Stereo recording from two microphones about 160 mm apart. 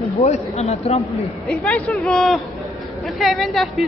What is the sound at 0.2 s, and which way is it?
Speech, 40° left (ahead or behind).